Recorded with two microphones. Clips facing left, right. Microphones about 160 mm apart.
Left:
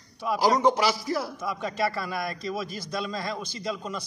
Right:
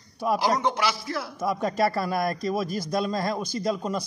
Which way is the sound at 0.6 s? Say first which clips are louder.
Left 3 dB; 35° left (ahead or behind).